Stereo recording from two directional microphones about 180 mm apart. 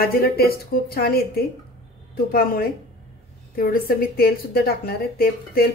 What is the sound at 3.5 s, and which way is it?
A woman's voice, 55° left (ahead or behind).